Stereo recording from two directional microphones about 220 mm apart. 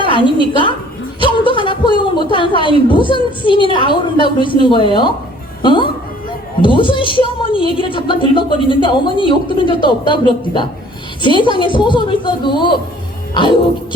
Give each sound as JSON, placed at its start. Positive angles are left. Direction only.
{"t": 0.0, "sound": "a woman's voice", "side_deg": 20}